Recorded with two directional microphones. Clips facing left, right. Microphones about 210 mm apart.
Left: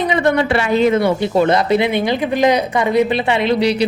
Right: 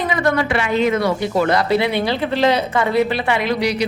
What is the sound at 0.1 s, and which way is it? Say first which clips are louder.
A woman's voice: left 3 dB; 25° left (ahead or behind).